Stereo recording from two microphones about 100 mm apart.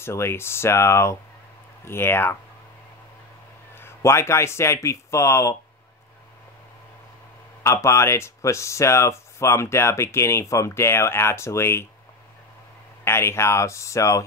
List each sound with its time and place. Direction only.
0.0 s speech: 25° left (ahead or behind)
3.7 s speech: 25° left (ahead or behind)
7.6 s speech: 30° left (ahead or behind)
13.0 s speech: 25° left (ahead or behind)